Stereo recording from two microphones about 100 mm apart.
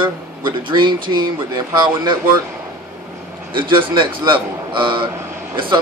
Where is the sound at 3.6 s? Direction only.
55° right (ahead or behind).